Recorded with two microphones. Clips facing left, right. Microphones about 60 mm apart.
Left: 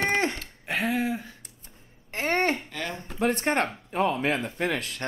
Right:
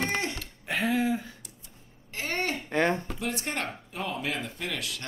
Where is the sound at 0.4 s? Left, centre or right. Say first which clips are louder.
Left 1 dB; centre.